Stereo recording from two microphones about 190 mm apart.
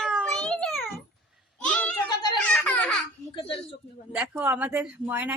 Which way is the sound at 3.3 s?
30° left (ahead or behind).